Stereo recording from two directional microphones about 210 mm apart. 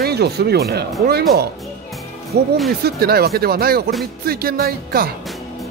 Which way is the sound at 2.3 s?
50° right (ahead or behind).